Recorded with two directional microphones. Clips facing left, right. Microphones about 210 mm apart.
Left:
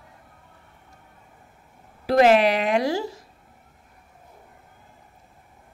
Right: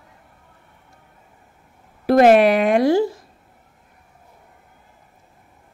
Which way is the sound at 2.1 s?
50° right (ahead or behind).